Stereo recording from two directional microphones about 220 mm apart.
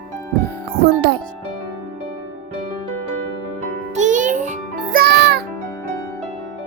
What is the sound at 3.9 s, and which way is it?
Music, 35° right (ahead or behind).